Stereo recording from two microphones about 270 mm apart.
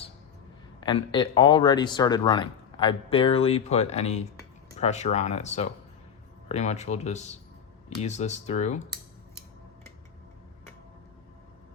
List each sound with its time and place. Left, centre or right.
0.8 s speech: centre